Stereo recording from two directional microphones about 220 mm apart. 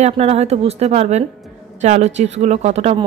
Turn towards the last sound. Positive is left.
turn(degrees=-30)  # may be behind; listen again after turning